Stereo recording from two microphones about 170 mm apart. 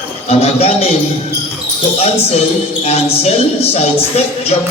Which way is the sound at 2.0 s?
40° left (ahead or behind).